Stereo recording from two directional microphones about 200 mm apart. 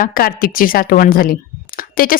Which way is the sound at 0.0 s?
45° left (ahead or behind).